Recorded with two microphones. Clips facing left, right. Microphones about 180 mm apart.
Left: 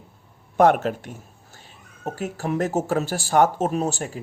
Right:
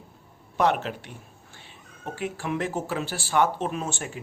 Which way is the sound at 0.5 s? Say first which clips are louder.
Left 6 dB; 50° left (ahead or behind).